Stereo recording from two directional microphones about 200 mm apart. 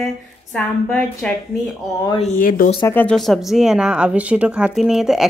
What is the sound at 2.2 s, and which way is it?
Speech, 40° left (ahead or behind).